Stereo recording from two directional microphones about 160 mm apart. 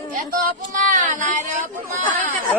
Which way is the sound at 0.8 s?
55° right (ahead or behind).